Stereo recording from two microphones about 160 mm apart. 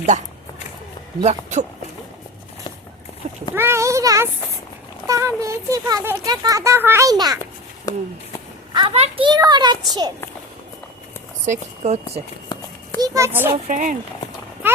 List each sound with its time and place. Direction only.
0.1 s speech: 50° right (ahead or behind)
3.5 s speech: 15° right (ahead or behind)
7.9 s speech: 20° left (ahead or behind)
8.9 s speech: 40° right (ahead or behind)
11.4 s speech: 45° right (ahead or behind)
13.0 s a child's voice: 20° right (ahead or behind)
13.7 s speech: 50° right (ahead or behind)